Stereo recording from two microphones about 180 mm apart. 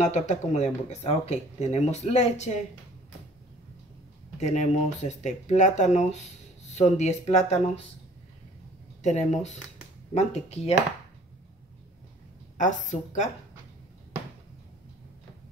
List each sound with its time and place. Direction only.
0.0 s speech: 40° left (ahead or behind)
4.4 s speech: 40° left (ahead or behind)
9.0 s speech: 40° left (ahead or behind)
12.5 s speech: 45° left (ahead or behind)